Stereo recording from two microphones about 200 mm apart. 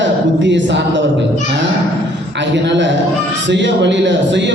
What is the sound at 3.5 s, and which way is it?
Speech, 60° right (ahead or behind).